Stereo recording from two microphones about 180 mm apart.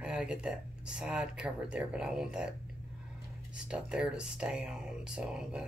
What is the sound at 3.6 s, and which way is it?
Speech, 5° right (ahead or behind).